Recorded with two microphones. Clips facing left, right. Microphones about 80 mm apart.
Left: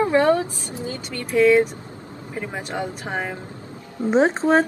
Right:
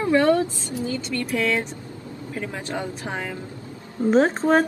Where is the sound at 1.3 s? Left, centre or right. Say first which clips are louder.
Left 10 dB; centre.